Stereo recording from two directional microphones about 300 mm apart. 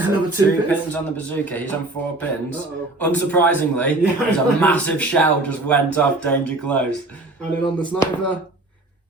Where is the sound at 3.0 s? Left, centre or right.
Centre.